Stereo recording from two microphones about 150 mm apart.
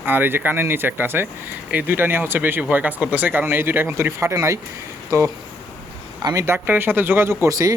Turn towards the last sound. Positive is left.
turn(degrees=-20)  # may be behind; listen again after turning